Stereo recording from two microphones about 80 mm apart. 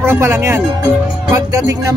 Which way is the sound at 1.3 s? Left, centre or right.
Right.